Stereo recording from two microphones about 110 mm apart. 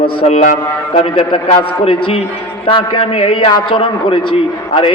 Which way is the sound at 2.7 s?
50° left (ahead or behind).